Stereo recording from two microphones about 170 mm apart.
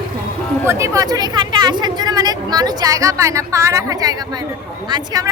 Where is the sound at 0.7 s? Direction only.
20° right (ahead or behind).